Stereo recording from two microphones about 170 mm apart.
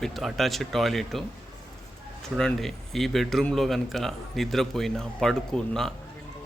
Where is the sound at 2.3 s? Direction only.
Centre (ahead or behind).